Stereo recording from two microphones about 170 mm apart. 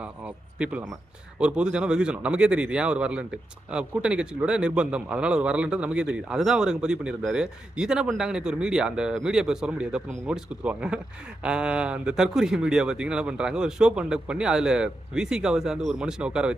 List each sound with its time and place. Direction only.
0.6 s a man's voice: 10° right (ahead or behind)